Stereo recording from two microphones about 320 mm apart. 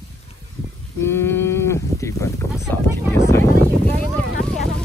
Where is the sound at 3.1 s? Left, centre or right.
Centre.